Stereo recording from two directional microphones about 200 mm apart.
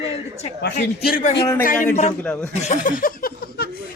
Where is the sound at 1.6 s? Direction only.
45° left (ahead or behind).